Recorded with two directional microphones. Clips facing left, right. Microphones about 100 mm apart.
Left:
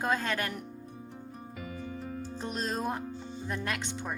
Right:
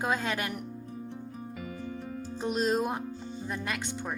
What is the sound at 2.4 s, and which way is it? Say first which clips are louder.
A woman's voice: right 7 dB; 15° right (ahead or behind).